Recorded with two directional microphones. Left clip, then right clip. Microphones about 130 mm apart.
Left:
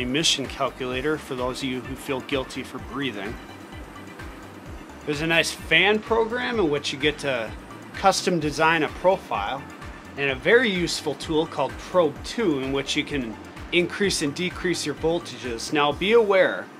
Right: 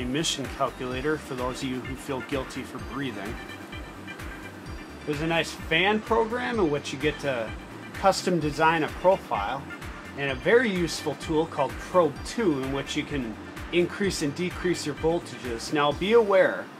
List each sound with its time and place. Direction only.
0.0 s speech: 40° left (ahead or behind)
5.0 s speech: 40° left (ahead or behind)